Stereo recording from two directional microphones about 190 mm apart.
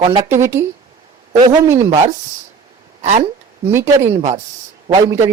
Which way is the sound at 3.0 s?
35° right (ahead or behind).